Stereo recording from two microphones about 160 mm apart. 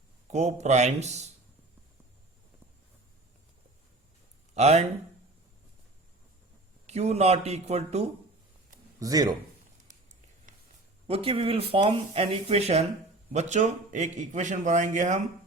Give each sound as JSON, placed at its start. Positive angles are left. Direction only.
{"t": 0.3, "sound": "a man's voice", "side_deg": -45}
{"t": 4.5, "sound": "a man's voice", "side_deg": -40}
{"t": 6.8, "sound": "a man's voice", "side_deg": -45}
{"t": 9.0, "sound": "speech", "side_deg": -20}
{"t": 11.0, "sound": "a man's voice", "side_deg": -35}